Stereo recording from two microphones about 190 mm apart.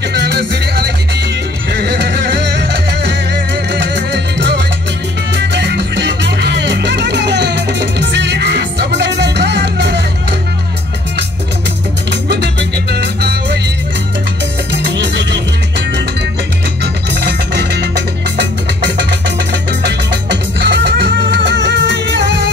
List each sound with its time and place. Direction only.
0.1 s music: 65° right (ahead or behind)
12.1 s music: 65° right (ahead or behind)
14.7 s music: 65° right (ahead or behind)
16.8 s music: 60° right (ahead or behind)